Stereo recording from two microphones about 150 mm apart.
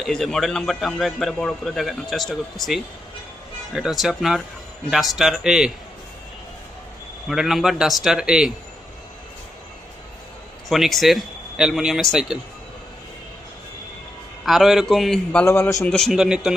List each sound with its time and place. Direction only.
0.0 s a man's voice: 5° left (ahead or behind)
7.3 s a man's voice: centre (ahead or behind)
10.7 s a man's voice: centre (ahead or behind)
14.4 s a man's voice: centre (ahead or behind)
15.4 s a man's voice: 15° left (ahead or behind)
16.0 s a man's voice: centre (ahead or behind)